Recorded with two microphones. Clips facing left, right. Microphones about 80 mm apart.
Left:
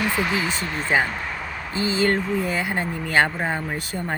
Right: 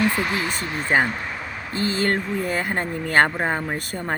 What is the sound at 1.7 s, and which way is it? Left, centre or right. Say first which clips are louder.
Speech: left 1 dB; right.